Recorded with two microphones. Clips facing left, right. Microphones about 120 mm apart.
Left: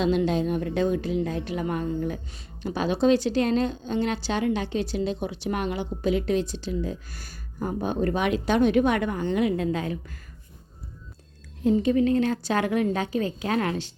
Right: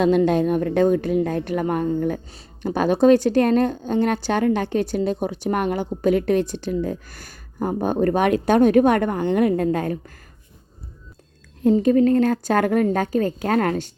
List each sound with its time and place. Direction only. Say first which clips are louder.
0.0 s a woman's voice: right 6 dB; 50° right (ahead or behind)
11.8 s a woman's voice: right 6 dB; 45° right (ahead or behind)